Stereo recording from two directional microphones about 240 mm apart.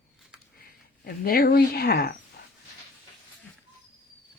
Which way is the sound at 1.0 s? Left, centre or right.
Left.